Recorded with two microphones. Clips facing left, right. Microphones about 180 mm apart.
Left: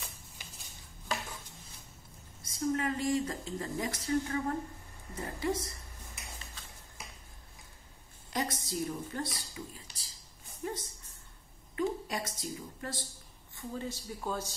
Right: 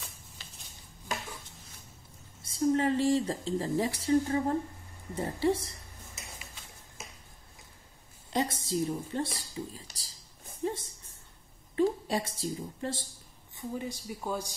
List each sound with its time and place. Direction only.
2.4 s speech: 30° right (ahead or behind)
8.3 s speech: 25° right (ahead or behind)
10.6 s a sound: 25° right (ahead or behind)
11.7 s a woman's voice: 30° right (ahead or behind)
13.6 s speech: 15° right (ahead or behind)